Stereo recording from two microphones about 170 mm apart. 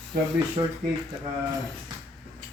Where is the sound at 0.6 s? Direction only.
25° right (ahead or behind).